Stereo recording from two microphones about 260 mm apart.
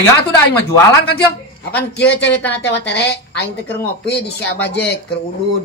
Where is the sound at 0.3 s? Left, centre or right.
Centre.